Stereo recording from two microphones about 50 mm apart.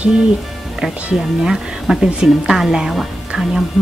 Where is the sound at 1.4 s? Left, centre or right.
Centre.